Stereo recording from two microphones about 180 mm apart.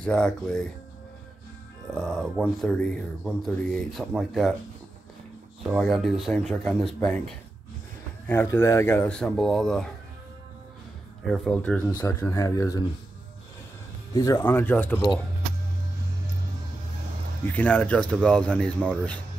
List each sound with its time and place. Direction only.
0.0 s speech: 5° left (ahead or behind)
2.0 s speech: centre (ahead or behind)
5.7 s speech: centre (ahead or behind)
11.2 s speech: 5° left (ahead or behind)
14.1 s speech: 20° left (ahead or behind)
17.5 s speech: 10° left (ahead or behind)